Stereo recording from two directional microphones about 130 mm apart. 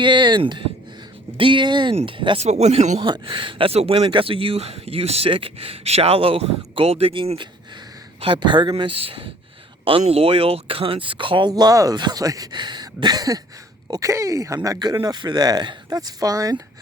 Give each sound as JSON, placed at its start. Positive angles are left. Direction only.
{"t": 0.0, "sound": "speech", "side_deg": -35}
{"t": 2.4, "sound": "speech", "side_deg": -60}
{"t": 3.0, "sound": "speech", "side_deg": -40}